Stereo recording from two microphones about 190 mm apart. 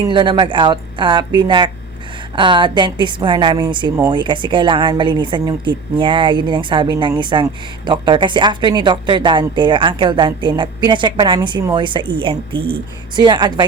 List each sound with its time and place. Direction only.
0.1 s speech: 25° right (ahead or behind)